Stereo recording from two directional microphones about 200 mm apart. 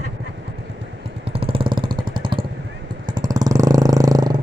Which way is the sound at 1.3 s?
30° right (ahead or behind).